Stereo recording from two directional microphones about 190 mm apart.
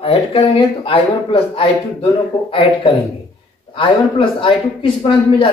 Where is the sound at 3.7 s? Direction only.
25° left (ahead or behind).